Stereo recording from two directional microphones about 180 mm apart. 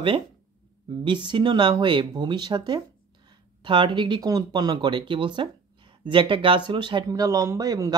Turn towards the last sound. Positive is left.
turn(degrees=-20)  # may be behind; listen again after turning